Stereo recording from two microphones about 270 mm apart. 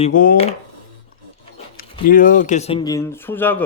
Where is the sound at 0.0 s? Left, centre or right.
Left.